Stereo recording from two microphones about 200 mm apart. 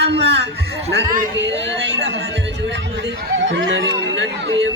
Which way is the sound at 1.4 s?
60° right (ahead or behind).